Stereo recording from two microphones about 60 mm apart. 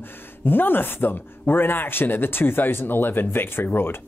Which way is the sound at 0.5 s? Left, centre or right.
Left.